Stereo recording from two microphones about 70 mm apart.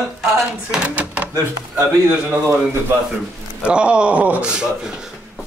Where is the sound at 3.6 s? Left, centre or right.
Centre.